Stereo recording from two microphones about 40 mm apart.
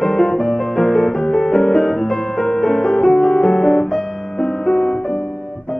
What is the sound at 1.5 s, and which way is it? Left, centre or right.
Music, centre.